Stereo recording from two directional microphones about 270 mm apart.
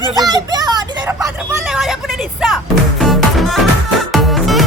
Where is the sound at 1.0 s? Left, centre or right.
Centre.